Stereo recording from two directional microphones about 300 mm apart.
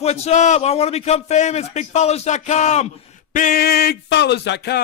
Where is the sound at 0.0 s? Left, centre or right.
Left.